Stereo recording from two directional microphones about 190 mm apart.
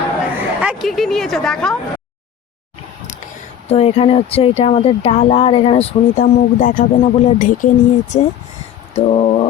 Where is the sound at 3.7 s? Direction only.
30° left (ahead or behind).